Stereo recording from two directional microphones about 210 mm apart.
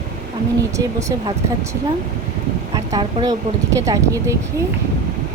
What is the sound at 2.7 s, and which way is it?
Speech, 20° right (ahead or behind).